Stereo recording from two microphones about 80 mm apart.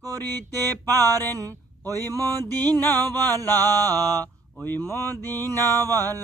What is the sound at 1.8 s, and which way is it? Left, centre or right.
Speech, left.